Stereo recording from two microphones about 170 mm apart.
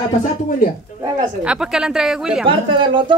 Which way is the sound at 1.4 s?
5° right (ahead or behind).